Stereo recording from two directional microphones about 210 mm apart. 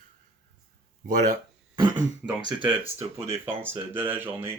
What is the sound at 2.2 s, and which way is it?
Speech, 5° right (ahead or behind).